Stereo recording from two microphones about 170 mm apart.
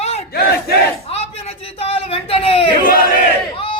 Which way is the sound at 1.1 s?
35° left (ahead or behind).